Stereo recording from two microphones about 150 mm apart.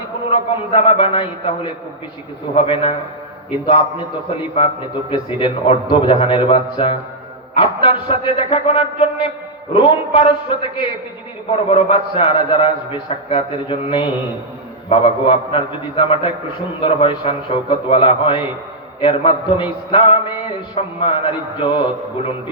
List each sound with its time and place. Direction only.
0.3 s a man's voice: 35° left (ahead or behind)
5.1 s a man's voice: 35° left (ahead or behind)